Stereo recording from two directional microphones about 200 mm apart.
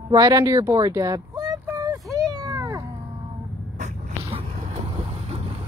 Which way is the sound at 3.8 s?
35° right (ahead or behind).